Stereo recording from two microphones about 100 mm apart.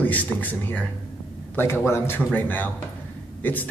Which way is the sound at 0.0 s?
15° left (ahead or behind).